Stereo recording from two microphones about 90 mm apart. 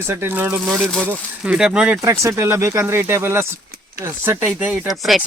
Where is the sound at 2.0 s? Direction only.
35° right (ahead or behind).